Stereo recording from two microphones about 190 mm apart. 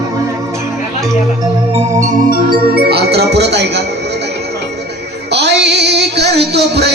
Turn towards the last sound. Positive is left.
turn(degrees=-60)  # may be behind; listen again after turning